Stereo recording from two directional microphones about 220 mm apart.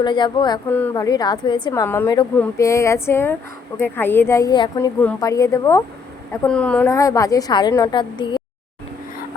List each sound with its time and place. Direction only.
0.0 s speech: 20° left (ahead or behind)
0.7 s a woman's voice: 10° left (ahead or behind)